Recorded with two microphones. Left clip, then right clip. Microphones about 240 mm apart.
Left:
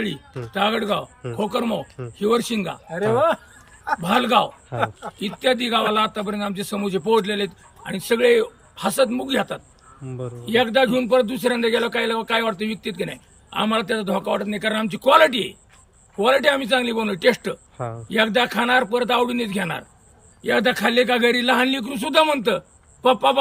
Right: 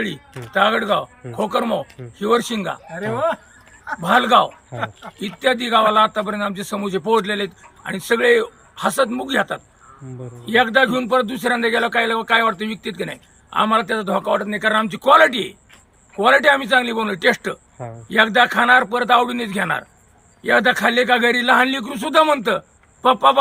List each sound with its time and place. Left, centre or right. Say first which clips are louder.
0.0 s a man's voice: right 2 dB; centre
2.9 s speech: left 4 dB; left
4.0 s a man's voice: right 5 dB; centre